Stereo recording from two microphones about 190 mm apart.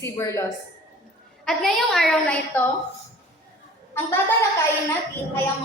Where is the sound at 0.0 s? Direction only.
15° left (ahead or behind).